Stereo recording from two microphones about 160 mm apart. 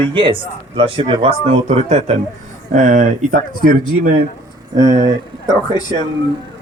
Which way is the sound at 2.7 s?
55° right (ahead or behind).